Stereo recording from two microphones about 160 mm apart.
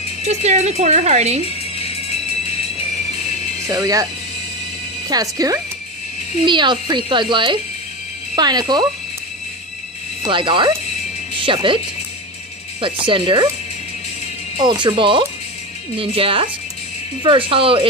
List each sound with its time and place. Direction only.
0.2 s speech: 45° right (ahead or behind)
1.4 s music: 40° left (ahead or behind)
3.6 s speech: 20° right (ahead or behind)
5.1 s speech: 20° right (ahead or behind)
10.2 s speech: 30° right (ahead or behind)
13.0 s speech: 30° right (ahead or behind)
14.6 s speech: 25° right (ahead or behind)